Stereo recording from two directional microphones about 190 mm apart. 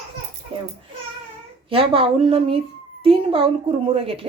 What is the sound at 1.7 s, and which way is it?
Speech, 30° right (ahead or behind).